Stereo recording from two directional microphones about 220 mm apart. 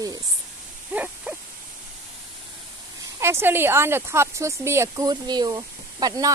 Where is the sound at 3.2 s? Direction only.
10° right (ahead or behind).